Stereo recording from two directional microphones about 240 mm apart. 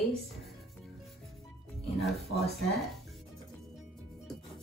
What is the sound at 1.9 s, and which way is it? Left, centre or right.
Speech, centre.